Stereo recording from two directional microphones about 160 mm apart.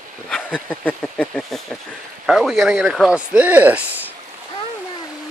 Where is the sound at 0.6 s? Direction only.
10° left (ahead or behind); by 4.0 s 10° right (ahead or behind).